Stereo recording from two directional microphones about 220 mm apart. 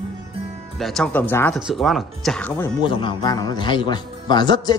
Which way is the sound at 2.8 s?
20° left (ahead or behind).